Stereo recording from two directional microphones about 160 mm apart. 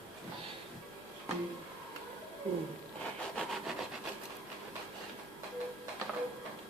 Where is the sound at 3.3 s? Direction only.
Centre (ahead or behind).